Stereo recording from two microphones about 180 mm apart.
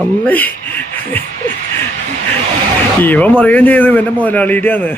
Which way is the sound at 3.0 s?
10° left (ahead or behind).